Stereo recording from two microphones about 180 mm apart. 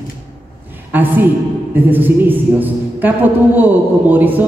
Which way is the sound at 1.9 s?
10° right (ahead or behind).